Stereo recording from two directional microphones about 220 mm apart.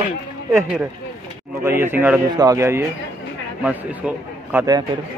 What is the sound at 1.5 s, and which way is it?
A man's voice, 10° right (ahead or behind).